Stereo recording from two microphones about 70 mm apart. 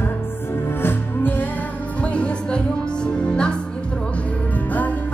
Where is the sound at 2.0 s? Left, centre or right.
Centre.